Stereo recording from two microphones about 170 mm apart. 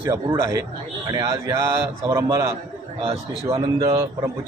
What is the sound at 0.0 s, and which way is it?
A man's voice, 15° right (ahead or behind).